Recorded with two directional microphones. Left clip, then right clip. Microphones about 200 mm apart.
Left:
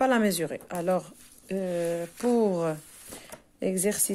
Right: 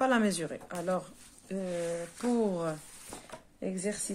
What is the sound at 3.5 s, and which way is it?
Speech, 50° left (ahead or behind).